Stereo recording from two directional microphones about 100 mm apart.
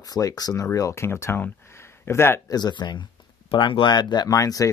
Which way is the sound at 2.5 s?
45° left (ahead or behind).